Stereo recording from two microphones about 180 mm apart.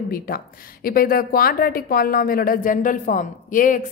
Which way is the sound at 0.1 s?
55° left (ahead or behind).